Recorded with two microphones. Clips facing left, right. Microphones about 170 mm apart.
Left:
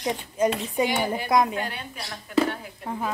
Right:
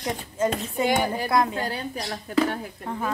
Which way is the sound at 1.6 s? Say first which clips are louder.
Right 5 dB; 35° right (ahead or behind).